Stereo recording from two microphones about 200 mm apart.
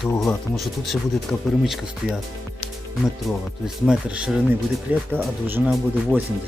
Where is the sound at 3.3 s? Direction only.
Centre (ahead or behind).